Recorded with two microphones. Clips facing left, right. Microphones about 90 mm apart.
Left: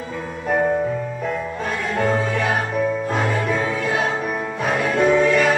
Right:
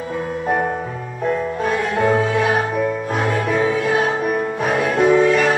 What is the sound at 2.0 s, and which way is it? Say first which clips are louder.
Music: right 3 dB; 10° right (ahead or behind).